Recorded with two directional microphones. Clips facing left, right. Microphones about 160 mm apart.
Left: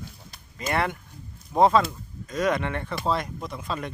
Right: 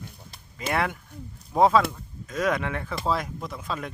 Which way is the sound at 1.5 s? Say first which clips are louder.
Even; centre (ahead or behind).